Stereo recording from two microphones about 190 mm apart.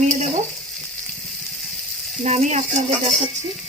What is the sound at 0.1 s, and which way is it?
Frying, 40° right (ahead or behind).